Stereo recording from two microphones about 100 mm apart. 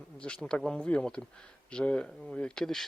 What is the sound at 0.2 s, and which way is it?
Speech, 10° left (ahead or behind).